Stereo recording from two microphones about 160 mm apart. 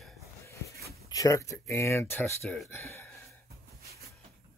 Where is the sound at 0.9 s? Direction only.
20° left (ahead or behind).